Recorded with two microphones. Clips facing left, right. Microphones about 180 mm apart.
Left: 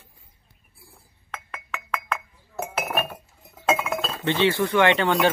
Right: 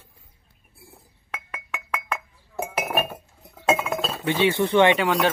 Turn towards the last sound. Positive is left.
turn(degrees=0)  # may be behind; listen again after turning